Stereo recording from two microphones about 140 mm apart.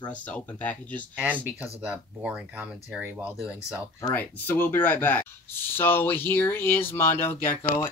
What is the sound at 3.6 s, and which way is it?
Speech, 15° left (ahead or behind).